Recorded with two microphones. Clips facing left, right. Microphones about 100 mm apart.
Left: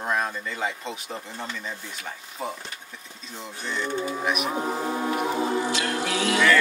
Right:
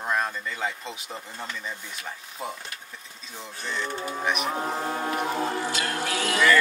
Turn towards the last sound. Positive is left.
turn(degrees=0)  # may be behind; listen again after turning